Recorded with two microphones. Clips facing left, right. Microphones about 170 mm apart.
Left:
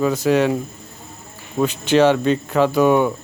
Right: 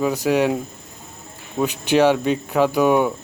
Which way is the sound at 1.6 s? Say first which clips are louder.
Left 2 dB; 10° right (ahead or behind).